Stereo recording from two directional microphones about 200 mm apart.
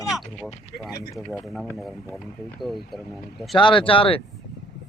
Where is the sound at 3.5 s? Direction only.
25° left (ahead or behind).